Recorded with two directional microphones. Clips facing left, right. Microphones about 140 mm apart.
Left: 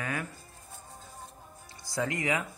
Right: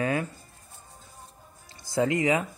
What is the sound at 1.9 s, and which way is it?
Speech, 25° right (ahead or behind).